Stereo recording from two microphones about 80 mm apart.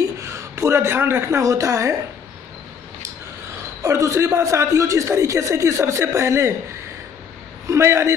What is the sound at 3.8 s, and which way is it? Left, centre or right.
A woman's voice, right.